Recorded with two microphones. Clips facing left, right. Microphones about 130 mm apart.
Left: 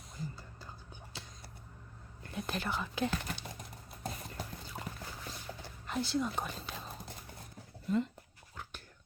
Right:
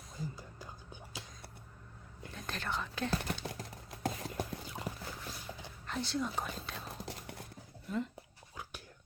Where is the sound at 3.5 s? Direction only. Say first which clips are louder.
Right 3 dB; 90° right.